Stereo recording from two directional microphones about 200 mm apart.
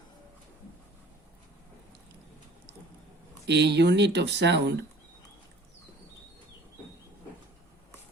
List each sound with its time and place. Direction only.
3.4 s speech: 60° right (ahead or behind)